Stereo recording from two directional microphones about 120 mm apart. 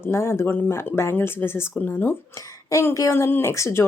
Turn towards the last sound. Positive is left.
turn(degrees=25)  # may be behind; listen again after turning